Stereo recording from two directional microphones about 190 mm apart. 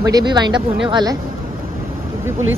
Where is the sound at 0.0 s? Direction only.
20° right (ahead or behind).